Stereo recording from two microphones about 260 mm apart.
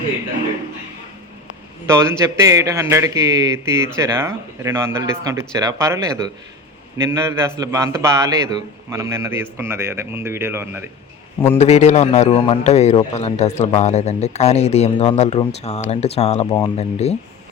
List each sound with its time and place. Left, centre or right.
1.9 s speech: centre
11.5 s a man's voice: left
16.5 s speech: centre
16.7 s a man's voice: left